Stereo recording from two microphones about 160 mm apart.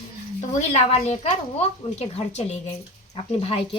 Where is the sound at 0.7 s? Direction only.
45° left (ahead or behind).